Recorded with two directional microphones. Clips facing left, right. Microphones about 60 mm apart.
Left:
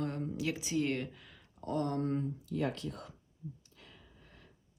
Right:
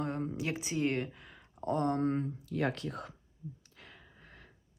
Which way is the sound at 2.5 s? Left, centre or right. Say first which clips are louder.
Right 3 dB; right.